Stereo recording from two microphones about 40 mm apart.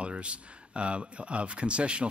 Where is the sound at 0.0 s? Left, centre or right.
Right.